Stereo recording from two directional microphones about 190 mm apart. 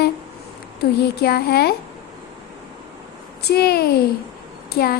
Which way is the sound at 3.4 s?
60° left (ahead or behind).